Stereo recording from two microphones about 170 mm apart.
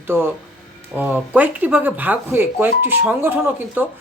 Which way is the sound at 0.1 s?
15° right (ahead or behind).